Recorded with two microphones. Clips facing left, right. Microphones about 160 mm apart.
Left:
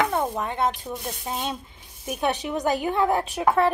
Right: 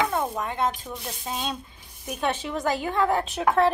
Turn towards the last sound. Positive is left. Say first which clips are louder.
# left 1 dB
turn(degrees=10)  # may be behind; listen again after turning